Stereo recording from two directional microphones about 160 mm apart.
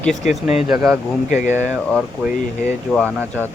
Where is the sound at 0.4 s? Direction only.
5° right (ahead or behind).